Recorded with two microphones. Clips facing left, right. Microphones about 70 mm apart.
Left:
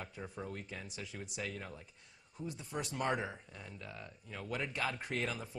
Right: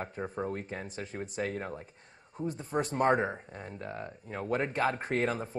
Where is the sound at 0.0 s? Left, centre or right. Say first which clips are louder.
Right 9 dB; right.